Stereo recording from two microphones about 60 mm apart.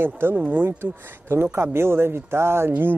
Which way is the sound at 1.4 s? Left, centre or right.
Right.